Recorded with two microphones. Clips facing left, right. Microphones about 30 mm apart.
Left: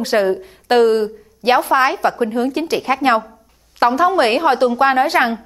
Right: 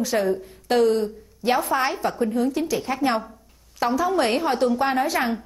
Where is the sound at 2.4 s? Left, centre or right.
Left.